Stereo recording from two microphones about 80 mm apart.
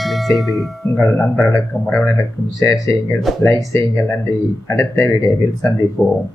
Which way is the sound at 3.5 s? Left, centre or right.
Left.